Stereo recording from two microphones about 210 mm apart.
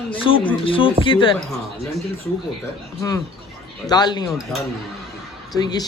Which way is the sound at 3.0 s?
15° left (ahead or behind).